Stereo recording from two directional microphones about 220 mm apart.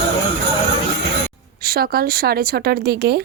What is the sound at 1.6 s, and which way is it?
Speech, 45° right (ahead or behind).